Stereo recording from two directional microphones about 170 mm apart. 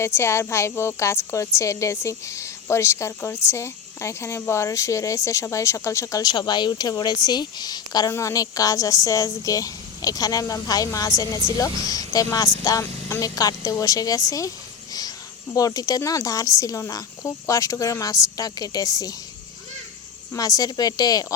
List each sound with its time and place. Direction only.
0.0 s a woman's voice: 15° left (ahead or behind)
15.5 s a woman's voice: 20° left (ahead or behind)
20.3 s a woman's voice: 20° left (ahead or behind)